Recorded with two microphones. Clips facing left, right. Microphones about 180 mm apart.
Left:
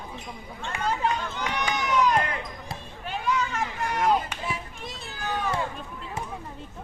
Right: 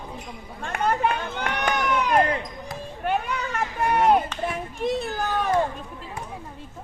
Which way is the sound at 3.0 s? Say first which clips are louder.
Right 2 dB; 60° right (ahead or behind).